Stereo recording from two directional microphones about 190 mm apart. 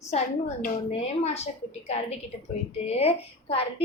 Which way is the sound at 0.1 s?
35° left (ahead or behind).